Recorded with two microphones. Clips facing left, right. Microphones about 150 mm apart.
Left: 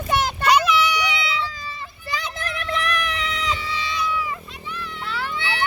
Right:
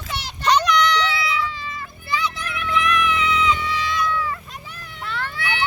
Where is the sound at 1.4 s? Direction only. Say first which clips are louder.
Right 2 dB; 35° left (ahead or behind).